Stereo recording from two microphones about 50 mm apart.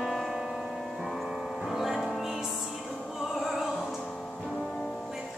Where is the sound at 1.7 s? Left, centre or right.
Centre.